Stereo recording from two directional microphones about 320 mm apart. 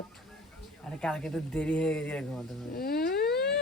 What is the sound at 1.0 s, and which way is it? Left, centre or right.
A man's voice, centre.